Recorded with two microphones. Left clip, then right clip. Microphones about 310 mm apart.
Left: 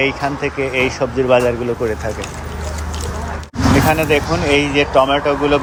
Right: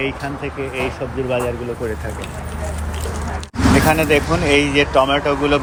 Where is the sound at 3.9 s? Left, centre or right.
Centre.